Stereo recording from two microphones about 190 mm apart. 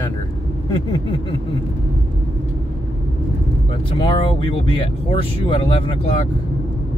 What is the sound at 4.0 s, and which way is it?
Speech, 30° left (ahead or behind).